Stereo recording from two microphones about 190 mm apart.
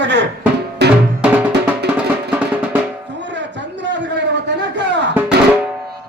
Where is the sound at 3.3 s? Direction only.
70° right (ahead or behind).